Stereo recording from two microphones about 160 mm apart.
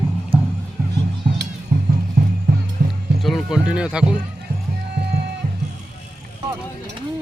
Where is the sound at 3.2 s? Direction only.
Centre (ahead or behind).